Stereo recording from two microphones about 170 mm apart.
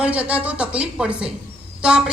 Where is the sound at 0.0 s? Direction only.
10° right (ahead or behind).